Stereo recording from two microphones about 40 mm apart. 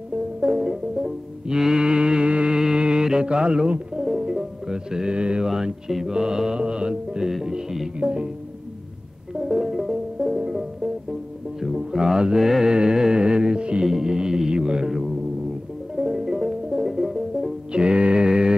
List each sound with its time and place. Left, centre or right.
0.4 s music: centre
5.5 s music: centre
8.0 s speech: right
9.3 s music: centre
12.7 s music: centre
13.8 s music: centre
16.0 s music: centre
17.7 s music: right